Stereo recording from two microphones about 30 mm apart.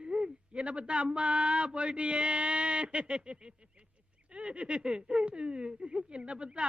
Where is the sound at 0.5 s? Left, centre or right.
Right.